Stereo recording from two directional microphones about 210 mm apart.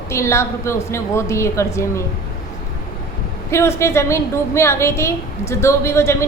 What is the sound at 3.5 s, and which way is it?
A woman's voice, 15° left (ahead or behind).